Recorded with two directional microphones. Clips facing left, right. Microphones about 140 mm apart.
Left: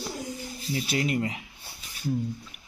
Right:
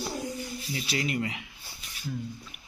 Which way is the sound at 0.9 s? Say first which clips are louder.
Left 3 dB; 45° left (ahead or behind).